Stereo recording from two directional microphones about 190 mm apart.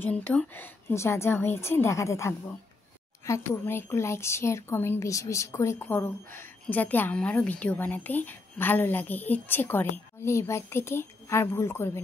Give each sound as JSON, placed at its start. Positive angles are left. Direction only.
{"t": 0.0, "sound": "speech", "side_deg": 10}